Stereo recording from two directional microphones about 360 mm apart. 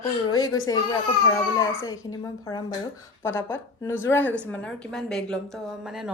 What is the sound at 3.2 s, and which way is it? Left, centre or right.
A woman's voice, centre.